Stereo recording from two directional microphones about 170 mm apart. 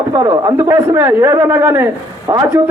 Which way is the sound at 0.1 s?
25° right (ahead or behind).